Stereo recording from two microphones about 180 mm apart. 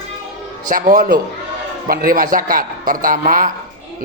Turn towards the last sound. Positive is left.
turn(degrees=-50)  # may be behind; listen again after turning